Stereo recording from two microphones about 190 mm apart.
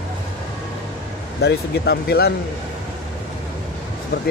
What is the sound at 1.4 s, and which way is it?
Speech, 60° left (ahead or behind).